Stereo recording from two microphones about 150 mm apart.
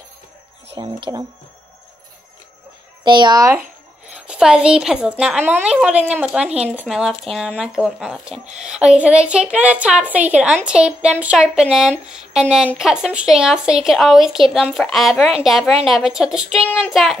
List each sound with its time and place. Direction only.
0.7 s speech: 30° right (ahead or behind)
3.0 s a child's voice: 30° right (ahead or behind)
4.1 s a woman's voice: 5° right (ahead or behind)